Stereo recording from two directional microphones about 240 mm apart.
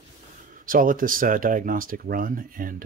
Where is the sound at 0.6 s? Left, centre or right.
Right.